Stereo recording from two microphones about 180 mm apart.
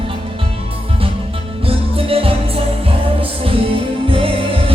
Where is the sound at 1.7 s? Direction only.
30° right (ahead or behind).